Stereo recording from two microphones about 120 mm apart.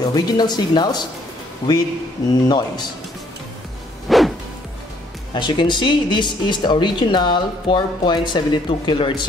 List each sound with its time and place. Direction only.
0.0 s speech: 35° left (ahead or behind)
4.1 s music: centre (ahead or behind)
5.3 s speech: 40° left (ahead or behind)